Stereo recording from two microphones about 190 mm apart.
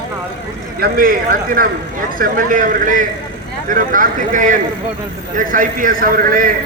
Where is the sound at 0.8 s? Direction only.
45° right (ahead or behind).